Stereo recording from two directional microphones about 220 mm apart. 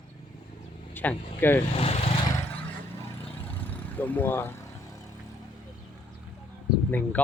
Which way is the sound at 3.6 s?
10° left (ahead or behind).